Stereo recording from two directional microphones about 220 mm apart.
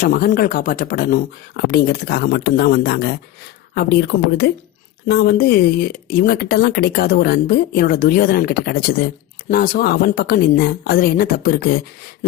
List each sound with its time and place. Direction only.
0.0 s speech: 40° left (ahead or behind)